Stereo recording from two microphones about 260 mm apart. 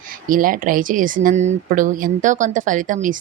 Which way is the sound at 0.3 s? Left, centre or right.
Right.